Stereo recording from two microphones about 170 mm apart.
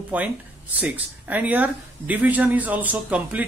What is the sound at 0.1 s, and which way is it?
Speech, 10° right (ahead or behind).